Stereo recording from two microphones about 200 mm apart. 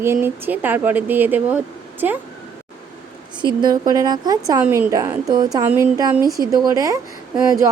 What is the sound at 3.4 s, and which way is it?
A woman's voice, 20° right (ahead or behind).